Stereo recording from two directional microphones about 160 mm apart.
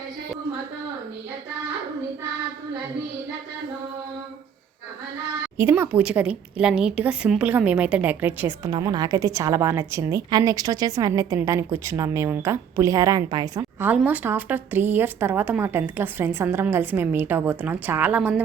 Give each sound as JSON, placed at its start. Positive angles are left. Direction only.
{"t": 5.5, "sound": "a woman's voice", "side_deg": -15}
{"t": 8.7, "sound": "a woman's voice", "side_deg": -25}
{"t": 13.8, "sound": "a woman's voice", "side_deg": -10}